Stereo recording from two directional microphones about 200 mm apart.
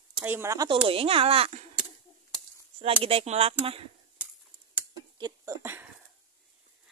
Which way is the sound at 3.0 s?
30° right (ahead or behind).